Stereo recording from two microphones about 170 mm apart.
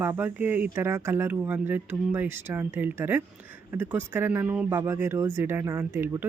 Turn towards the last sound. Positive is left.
turn(degrees=-15)  # may be behind; listen again after turning